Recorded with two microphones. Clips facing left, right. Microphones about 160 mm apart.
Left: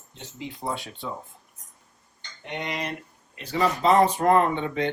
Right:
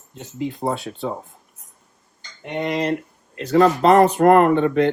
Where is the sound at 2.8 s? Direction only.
85° right.